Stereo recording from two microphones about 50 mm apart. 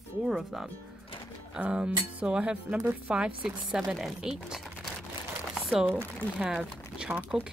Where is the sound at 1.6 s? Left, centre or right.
Right.